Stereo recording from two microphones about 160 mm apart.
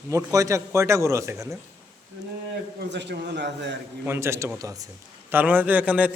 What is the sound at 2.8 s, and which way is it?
Speech, 90° right.